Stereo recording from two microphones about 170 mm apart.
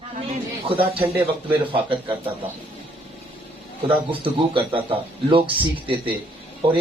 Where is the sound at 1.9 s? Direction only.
30° right (ahead or behind).